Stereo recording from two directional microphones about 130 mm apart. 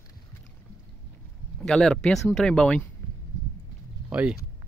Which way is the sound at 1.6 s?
5° left (ahead or behind).